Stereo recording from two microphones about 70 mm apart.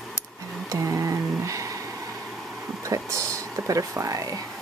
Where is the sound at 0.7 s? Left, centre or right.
Right.